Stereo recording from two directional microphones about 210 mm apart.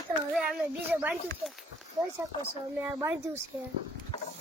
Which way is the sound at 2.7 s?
10° right (ahead or behind).